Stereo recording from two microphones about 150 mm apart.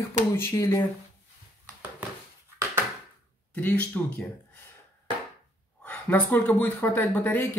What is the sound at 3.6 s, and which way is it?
Speech, 10° left (ahead or behind).